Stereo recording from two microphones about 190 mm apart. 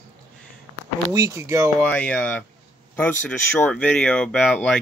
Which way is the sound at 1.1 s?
15° right (ahead or behind).